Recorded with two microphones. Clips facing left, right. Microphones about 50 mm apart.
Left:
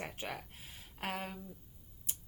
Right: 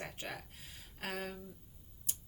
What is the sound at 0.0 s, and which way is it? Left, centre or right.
Speech, centre.